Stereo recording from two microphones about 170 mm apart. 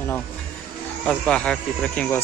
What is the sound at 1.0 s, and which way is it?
Speech, 5° left (ahead or behind).